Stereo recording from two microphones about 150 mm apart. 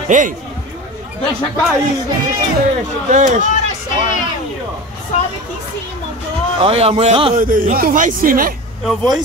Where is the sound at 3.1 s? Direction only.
60° right (ahead or behind).